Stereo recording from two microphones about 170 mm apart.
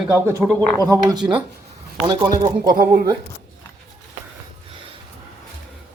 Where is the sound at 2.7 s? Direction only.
60° right (ahead or behind).